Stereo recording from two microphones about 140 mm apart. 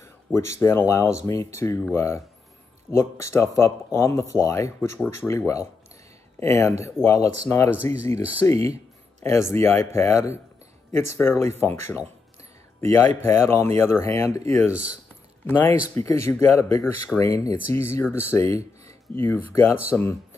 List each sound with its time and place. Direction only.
0.0 s speech: 20° left (ahead or behind)